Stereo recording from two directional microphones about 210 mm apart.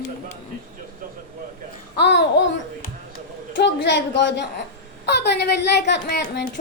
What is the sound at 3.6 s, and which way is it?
A man's voice, 55° left (ahead or behind).